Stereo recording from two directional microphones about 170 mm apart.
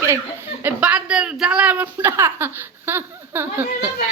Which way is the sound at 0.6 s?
10° right (ahead or behind).